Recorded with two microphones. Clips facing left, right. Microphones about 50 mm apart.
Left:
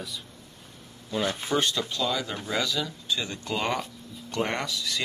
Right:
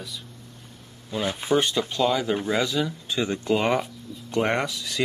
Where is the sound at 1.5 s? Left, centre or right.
Centre.